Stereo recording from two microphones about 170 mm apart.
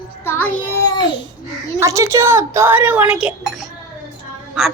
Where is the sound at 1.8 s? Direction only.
15° right (ahead or behind).